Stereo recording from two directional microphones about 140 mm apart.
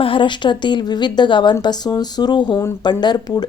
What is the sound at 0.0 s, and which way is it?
Speech, 40° left (ahead or behind).